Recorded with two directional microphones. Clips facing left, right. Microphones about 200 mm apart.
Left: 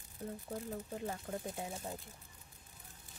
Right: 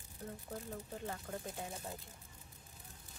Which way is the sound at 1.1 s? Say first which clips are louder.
Left 3 dB; 20° left (ahead or behind).